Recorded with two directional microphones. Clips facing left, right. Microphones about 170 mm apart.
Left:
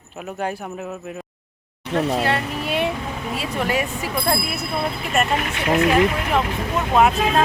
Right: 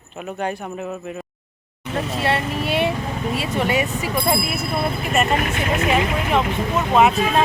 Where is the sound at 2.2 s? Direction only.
Centre (ahead or behind).